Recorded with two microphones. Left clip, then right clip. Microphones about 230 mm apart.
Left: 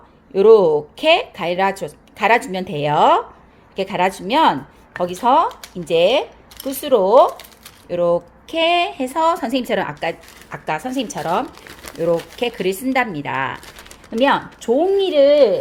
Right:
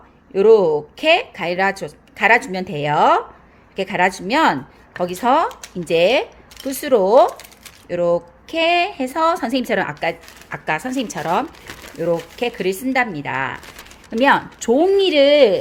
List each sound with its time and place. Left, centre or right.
0.3 s a woman's voice: centre; by 15.5 s right